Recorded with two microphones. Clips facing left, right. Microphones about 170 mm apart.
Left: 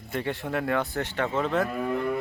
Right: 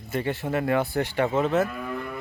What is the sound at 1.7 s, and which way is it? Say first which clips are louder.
Cattle: left 5 dB; 25° left (ahead or behind).